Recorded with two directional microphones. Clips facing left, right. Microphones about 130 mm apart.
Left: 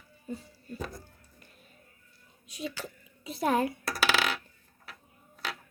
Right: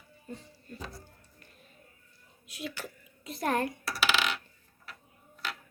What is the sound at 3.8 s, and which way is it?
Coin, 40° left (ahead or behind).